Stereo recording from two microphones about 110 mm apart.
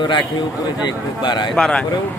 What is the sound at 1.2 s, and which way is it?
Speech, 45° left (ahead or behind).